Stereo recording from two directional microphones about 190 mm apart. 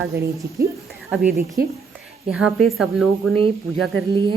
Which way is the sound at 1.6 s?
50° right (ahead or behind).